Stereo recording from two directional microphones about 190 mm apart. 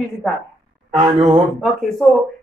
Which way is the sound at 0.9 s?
25° right (ahead or behind).